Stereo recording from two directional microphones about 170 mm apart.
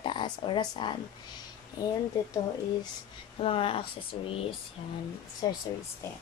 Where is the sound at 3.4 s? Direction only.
35° left (ahead or behind).